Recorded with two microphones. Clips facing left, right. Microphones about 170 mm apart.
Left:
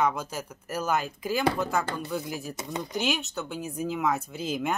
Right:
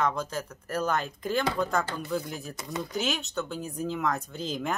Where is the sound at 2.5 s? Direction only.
20° left (ahead or behind).